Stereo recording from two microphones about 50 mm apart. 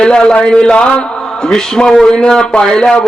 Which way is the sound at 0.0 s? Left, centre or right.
Centre.